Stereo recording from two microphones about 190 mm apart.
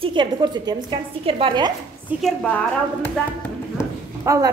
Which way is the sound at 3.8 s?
15° left (ahead or behind).